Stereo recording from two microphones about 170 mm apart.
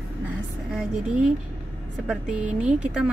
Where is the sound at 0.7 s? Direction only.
5° right (ahead or behind).